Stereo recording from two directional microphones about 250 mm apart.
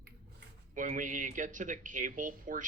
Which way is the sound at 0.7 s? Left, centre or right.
Right.